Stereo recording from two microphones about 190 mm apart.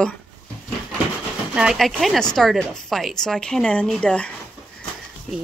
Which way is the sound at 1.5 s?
5° right (ahead or behind).